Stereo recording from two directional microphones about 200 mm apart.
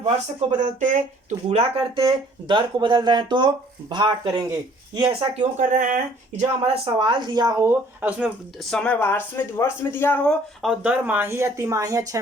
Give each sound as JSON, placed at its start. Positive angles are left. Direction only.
{"t": 0.6, "sound": "speech", "side_deg": -40}
{"t": 8.7, "sound": "speech", "side_deg": 5}
{"t": 10.6, "sound": "speech", "side_deg": -5}